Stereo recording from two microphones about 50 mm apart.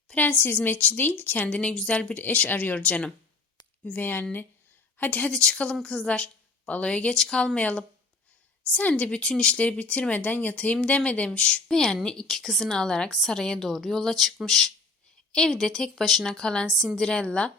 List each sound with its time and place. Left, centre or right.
0.2 s a woman's voice: left
1.5 s speech: left
3.8 s a woman's voice: left
5.3 s a woman's voice: centre
7.1 s speech: centre
11.7 s a woman's voice: centre